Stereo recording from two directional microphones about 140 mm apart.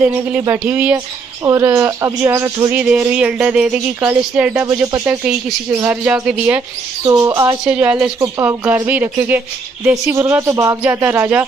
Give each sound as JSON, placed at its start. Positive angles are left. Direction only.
{"t": 0.0, "sound": "speech", "side_deg": -15}
{"t": 7.1, "sound": "speech", "side_deg": -25}
{"t": 7.6, "sound": "speech", "side_deg": -10}